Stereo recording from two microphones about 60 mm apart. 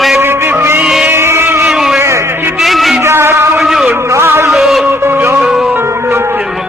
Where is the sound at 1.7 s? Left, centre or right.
Centre.